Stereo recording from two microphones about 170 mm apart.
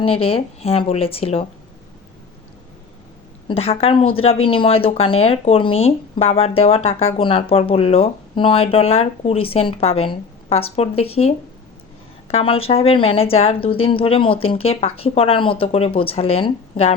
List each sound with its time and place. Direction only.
0.0 s speech: 35° left (ahead or behind)
3.5 s speech: 35° left (ahead or behind)